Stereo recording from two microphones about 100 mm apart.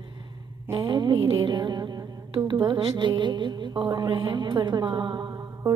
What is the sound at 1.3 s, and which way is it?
A woman's voice, 50° right (ahead or behind).